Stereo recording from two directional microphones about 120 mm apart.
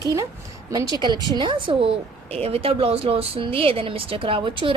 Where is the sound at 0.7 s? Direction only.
35° right (ahead or behind).